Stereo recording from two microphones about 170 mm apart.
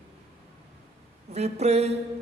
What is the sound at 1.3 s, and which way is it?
Speech, 40° right (ahead or behind).